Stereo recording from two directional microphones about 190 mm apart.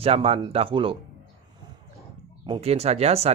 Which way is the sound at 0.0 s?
30° right (ahead or behind).